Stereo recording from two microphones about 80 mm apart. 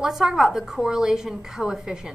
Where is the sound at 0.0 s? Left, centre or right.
Centre.